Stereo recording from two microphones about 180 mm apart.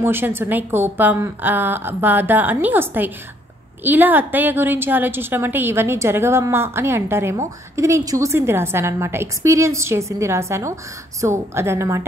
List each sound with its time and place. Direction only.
0.0 s a woman's voice: 10° right (ahead or behind)